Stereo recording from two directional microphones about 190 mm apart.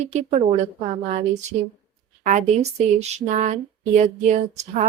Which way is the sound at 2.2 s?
40° right (ahead or behind).